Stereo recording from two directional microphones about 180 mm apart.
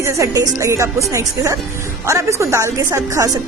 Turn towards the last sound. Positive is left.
turn(degrees=-15)  # may be behind; listen again after turning